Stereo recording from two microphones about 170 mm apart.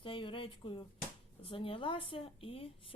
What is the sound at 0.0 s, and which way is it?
A woman's voice, 30° left (ahead or behind).